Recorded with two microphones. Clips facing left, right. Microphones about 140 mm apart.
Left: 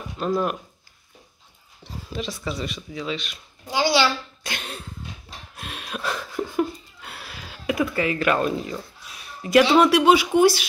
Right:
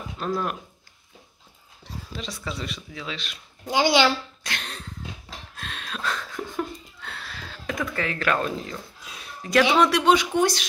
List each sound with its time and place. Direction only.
0.3 s speech: 5° left (ahead or behind)
2.1 s speech: centre (ahead or behind)
3.6 s a child's voice: 20° right (ahead or behind)
4.4 s cough: 5° left (ahead or behind)
5.6 s laughter: 10° left (ahead or behind)
9.4 s speech: 5° left (ahead or behind)